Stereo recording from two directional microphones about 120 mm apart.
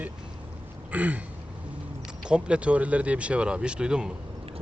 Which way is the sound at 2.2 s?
10° right (ahead or behind).